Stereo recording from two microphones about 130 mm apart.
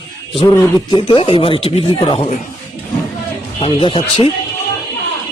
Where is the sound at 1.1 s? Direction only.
45° left (ahead or behind).